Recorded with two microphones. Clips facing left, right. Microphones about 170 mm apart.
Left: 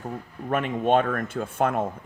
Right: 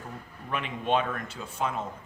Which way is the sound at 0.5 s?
50° left (ahead or behind).